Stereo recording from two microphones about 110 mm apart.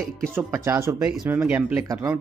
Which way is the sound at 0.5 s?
25° right (ahead or behind).